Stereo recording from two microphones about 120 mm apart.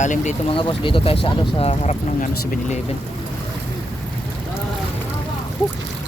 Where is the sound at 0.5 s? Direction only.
45° left (ahead or behind); by 2.0 s 60° left (ahead or behind).